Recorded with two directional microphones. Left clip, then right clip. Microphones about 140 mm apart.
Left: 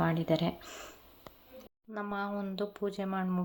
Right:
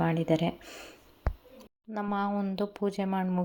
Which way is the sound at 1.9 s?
25° right (ahead or behind).